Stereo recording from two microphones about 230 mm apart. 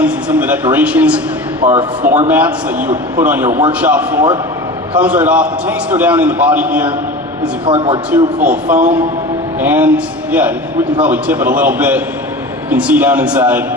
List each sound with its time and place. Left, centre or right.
0.0 s a man's voice: centre
7.6 s speech: right
8.1 s a man's voice: centre